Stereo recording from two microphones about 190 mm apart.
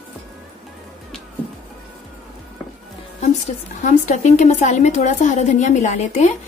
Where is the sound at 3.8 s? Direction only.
40° left (ahead or behind).